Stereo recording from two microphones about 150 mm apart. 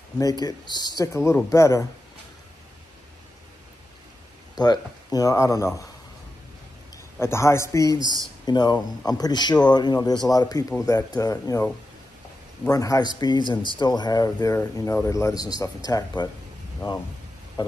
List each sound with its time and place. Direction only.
0.2 s speech: 25° left (ahead or behind)
4.6 s speech: 25° left (ahead or behind)
7.2 s speech: 15° left (ahead or behind)
12.6 s speech: 25° left (ahead or behind)